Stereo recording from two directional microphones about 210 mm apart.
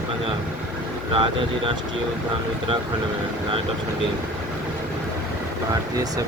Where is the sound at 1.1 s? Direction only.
25° right (ahead or behind).